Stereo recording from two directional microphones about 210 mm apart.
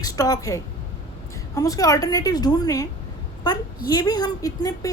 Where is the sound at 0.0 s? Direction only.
15° left (ahead or behind).